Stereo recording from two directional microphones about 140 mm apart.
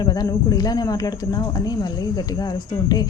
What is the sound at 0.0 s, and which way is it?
Speech, 30° left (ahead or behind).